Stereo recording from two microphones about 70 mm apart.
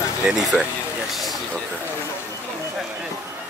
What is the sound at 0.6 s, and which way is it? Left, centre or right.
Speech, centre.